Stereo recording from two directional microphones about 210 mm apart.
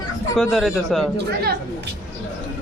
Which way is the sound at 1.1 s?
50° right (ahead or behind).